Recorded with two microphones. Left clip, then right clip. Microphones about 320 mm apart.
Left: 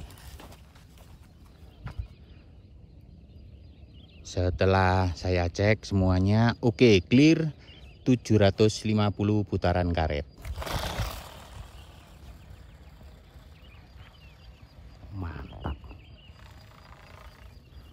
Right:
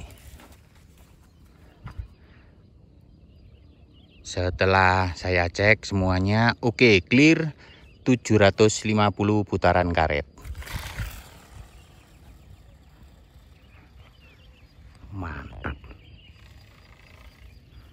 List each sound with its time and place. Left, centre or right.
0.0 s clip-clop: centre
1.8 s a sound: centre
4.2 s speech: centre
10.4 s roar: left
15.1 s frog: centre